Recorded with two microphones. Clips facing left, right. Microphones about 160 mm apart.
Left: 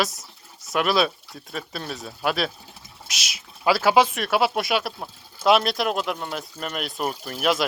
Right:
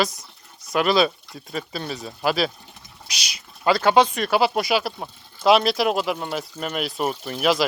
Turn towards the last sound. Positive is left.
turn(degrees=0)  # may be behind; listen again after turning